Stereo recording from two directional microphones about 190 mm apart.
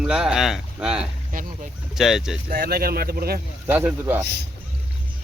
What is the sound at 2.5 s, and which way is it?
Speech, 50° right (ahead or behind).